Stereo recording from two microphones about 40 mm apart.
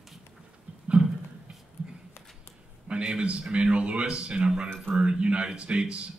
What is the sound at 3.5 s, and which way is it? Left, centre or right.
A man's voice, right.